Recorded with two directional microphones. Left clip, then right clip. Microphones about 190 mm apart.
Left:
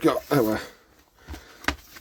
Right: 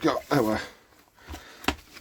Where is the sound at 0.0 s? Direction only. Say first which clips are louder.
Left 2 dB; 10° left (ahead or behind).